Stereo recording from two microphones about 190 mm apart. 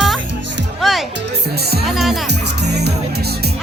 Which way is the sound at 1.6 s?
55° right (ahead or behind).